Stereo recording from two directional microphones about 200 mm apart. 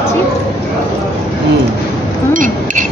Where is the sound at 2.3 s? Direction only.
40° right (ahead or behind).